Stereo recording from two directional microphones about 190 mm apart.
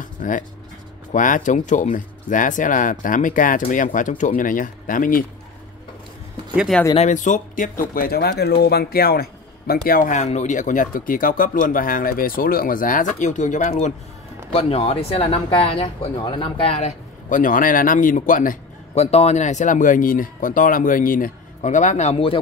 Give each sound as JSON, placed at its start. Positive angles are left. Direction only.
{"t": 0.0, "sound": "music", "side_deg": 45}
{"t": 1.1, "sound": "speech", "side_deg": 45}
{"t": 6.5, "sound": "speech", "side_deg": -5}
{"t": 7.0, "sound": "speech", "side_deg": 40}